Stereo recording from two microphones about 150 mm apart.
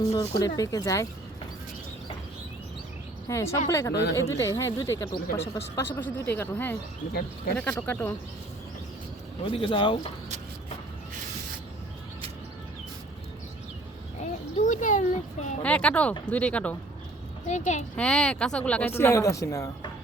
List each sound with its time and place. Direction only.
0.0 s speech: 20° left (ahead or behind)
3.2 s a woman's voice: 20° left (ahead or behind)
7.1 s speech: 90° left
7.5 s speech: 10° left (ahead or behind)
9.4 s speech: 35° left (ahead or behind)
14.5 s a sound: 55° left (ahead or behind)
15.6 s speech: 10° left (ahead or behind)
17.4 s a woman's voice: 55° left (ahead or behind)
17.9 s speech: 5° left (ahead or behind); by 19.9 s 20° left (ahead or behind)